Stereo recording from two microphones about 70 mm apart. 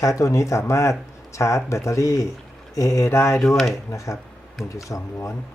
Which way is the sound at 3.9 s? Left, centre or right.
Left.